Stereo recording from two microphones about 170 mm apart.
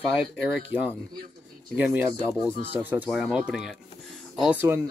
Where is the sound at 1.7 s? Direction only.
10° right (ahead or behind).